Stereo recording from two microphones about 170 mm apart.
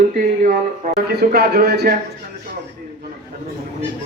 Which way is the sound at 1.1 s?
70° right (ahead or behind).